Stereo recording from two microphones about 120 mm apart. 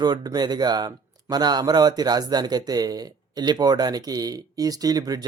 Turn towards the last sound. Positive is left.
turn(degrees=-35)  # may be behind; listen again after turning